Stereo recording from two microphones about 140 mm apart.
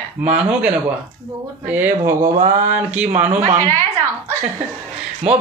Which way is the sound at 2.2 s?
70° right (ahead or behind).